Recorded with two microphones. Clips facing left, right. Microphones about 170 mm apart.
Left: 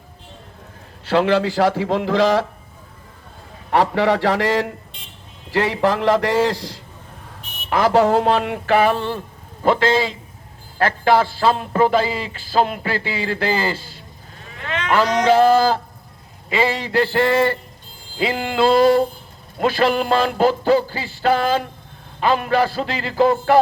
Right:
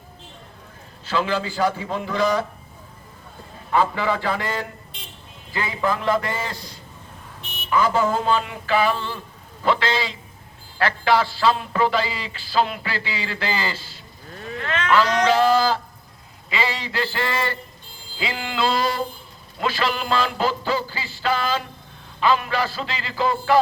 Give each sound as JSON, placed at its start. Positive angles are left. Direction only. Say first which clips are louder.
{"t": 1.0, "sound": "a man's voice", "louder": "left 7 dB", "side_deg": 65}
{"t": 3.7, "sound": "a man's voice", "louder": "left 4 dB", "side_deg": 70}
{"t": 5.5, "sound": "a man's voice", "louder": "left 6 dB", "side_deg": 75}
{"t": 7.7, "sound": "a sound", "louder": "left 5 dB", "side_deg": 80}
{"t": 14.6, "sound": "cattle", "louder": "left 1 dB", "side_deg": 15}
{"t": 15.3, "sound": "a sound", "louder": "left 8 dB", "side_deg": 55}